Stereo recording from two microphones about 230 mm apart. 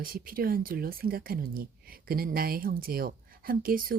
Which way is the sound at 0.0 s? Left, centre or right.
Right.